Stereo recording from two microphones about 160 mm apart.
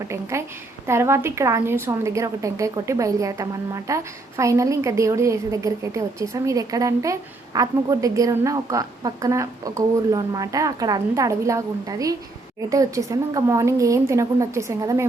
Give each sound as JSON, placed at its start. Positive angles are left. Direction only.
{"t": 0.1, "sound": "a woman's voice", "side_deg": -15}